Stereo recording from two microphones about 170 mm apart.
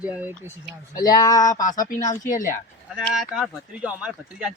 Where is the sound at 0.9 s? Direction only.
20° left (ahead or behind).